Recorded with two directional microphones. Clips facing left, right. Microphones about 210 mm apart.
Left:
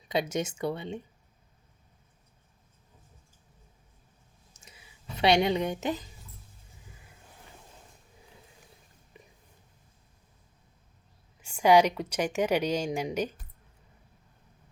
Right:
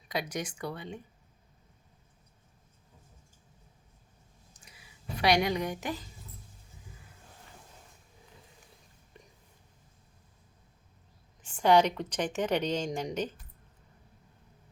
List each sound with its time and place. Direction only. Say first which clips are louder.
0.1 s a woman's voice: left 5 dB; 25° left (ahead or behind)
5.1 s a woman's voice: left 3 dB; 25° left (ahead or behind)
9.2 s whispering: left 1 dB; 5° left (ahead or behind)
11.3 s a woman's voice: left 2 dB; 10° left (ahead or behind)